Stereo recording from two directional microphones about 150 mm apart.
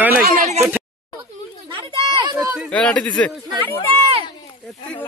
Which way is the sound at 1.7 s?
35° right (ahead or behind).